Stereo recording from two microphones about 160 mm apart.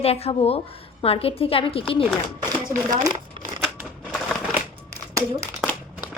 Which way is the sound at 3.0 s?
25° right (ahead or behind).